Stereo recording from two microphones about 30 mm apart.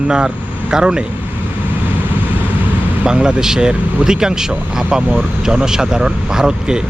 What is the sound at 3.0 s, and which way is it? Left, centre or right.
Speech, right.